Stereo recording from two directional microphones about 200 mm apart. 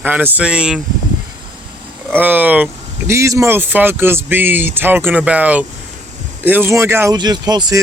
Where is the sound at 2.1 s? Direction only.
10° right (ahead or behind).